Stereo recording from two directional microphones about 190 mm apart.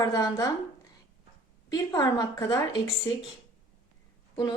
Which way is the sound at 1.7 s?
20° left (ahead or behind).